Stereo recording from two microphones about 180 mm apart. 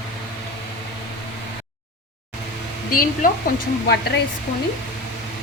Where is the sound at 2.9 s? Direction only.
50° left (ahead or behind).